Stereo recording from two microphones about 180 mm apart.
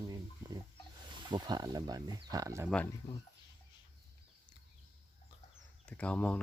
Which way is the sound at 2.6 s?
5° left (ahead or behind).